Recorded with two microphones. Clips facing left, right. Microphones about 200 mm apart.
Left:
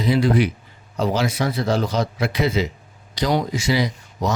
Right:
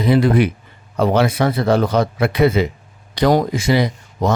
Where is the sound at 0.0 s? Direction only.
55° right (ahead or behind).